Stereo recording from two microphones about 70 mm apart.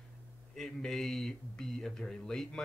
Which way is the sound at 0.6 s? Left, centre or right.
Centre.